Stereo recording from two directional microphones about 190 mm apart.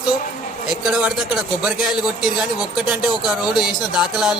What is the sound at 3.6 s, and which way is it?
Music, 5° right (ahead or behind).